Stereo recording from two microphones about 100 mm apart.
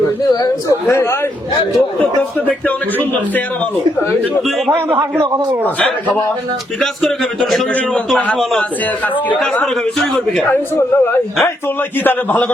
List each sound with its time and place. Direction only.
2.5 s a man's voice: 15° left (ahead or behind)
4.7 s a man's voice: 25° right (ahead or behind)
7.7 s a man's voice: 15° left (ahead or behind)
10.8 s a man's voice: 25° left (ahead or behind)